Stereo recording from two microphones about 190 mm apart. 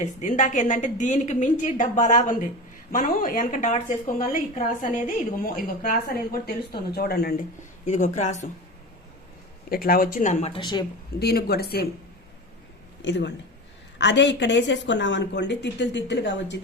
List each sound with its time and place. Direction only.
0.0 s a woman's voice: 40° left (ahead or behind)
7.9 s a woman's voice: 40° left (ahead or behind)
9.6 s a woman's voice: 50° left (ahead or behind); by 10.8 s 25° left (ahead or behind)
11.2 s speech: 55° left (ahead or behind)
13.0 s speech: 70° left (ahead or behind)